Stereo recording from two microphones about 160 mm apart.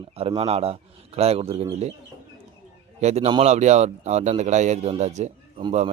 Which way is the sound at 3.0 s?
45° right (ahead or behind).